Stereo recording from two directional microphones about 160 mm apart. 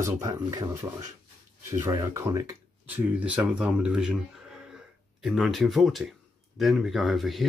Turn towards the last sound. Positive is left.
turn(degrees=0)  # may be behind; listen again after turning